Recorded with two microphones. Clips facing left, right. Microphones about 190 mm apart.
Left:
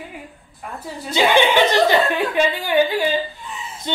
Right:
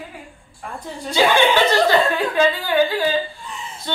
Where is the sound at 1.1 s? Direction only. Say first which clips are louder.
Even; 20° left (ahead or behind).